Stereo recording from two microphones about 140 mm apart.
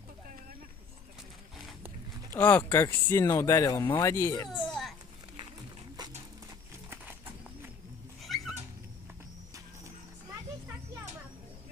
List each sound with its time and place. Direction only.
2.3 s speech: 15° left (ahead or behind)
4.6 s a sound: 5° left (ahead or behind)
8.2 s cat: centre (ahead or behind)